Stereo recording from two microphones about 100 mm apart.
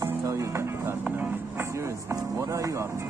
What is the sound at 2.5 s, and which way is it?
Music, 30° right (ahead or behind).